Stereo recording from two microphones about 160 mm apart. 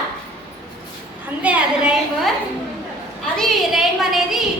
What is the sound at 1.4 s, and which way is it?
Speech, 5° right (ahead or behind).